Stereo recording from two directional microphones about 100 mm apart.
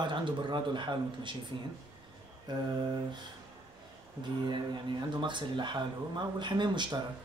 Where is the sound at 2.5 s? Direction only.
45° right (ahead or behind).